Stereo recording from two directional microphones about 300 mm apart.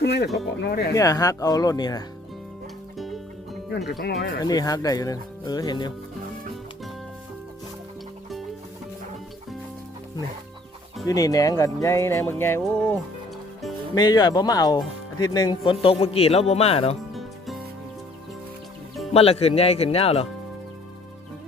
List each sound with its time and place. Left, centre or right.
0.0 s speech: left
0.9 s speech: centre
4.0 s speech: left
4.4 s speech: centre
11.0 s a man's voice: centre
17.2 s music: centre
19.1 s a man's voice: centre